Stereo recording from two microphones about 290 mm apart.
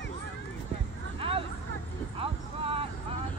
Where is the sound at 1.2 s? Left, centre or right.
Centre.